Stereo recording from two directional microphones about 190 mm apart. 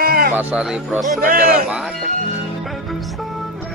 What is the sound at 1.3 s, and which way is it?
Speech, 50° right (ahead or behind).